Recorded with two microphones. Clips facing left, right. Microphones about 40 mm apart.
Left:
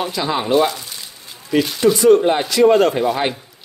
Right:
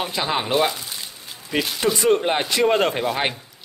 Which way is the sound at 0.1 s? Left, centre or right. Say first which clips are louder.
Left 4 dB; right.